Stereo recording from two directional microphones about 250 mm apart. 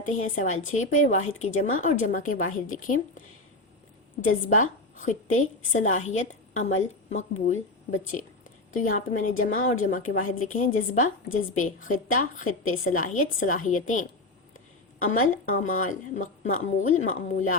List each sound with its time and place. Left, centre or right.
0.0 s speech: left
0.4 s a woman's voice: left
0.9 s a woman's voice: left
4.4 s a woman's voice: left